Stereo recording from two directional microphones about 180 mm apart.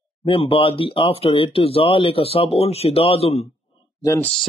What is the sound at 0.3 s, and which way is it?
Speech, 30° left (ahead or behind).